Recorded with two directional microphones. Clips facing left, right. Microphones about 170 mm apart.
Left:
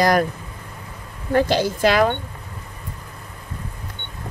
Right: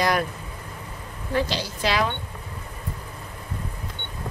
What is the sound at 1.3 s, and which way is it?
Speech, 50° left (ahead or behind).